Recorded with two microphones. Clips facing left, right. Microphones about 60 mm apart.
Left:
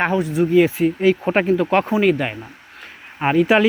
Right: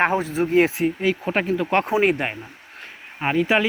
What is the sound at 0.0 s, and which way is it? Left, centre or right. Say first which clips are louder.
Speech: left 2 dB; right.